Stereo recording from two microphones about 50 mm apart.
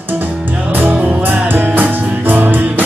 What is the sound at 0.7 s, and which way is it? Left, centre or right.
Music, right.